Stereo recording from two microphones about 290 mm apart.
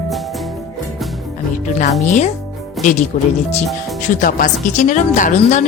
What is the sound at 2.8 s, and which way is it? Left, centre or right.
Speech, left.